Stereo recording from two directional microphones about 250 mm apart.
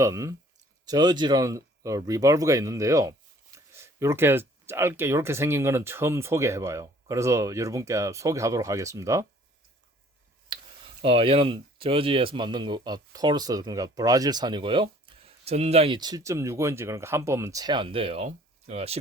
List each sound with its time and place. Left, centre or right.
0.0 s speech: centre
10.5 s clicking: centre
11.0 s speech: right